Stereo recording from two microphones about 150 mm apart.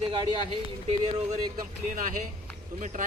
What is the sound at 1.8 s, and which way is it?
Speech, 60° right (ahead or behind).